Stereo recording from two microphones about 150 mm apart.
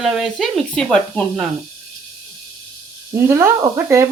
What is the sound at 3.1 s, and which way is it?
Speech, 20° right (ahead or behind).